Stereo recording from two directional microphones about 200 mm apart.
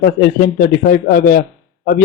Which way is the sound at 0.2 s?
50° left (ahead or behind).